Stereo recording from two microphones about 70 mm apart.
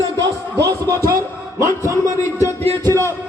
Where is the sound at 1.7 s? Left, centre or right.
Left.